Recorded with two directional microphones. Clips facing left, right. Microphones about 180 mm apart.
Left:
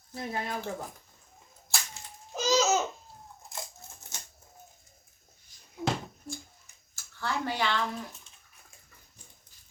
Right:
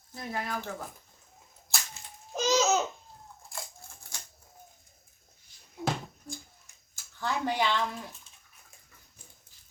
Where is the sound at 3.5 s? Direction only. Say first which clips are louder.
Left 1 dB; 20° left (ahead or behind).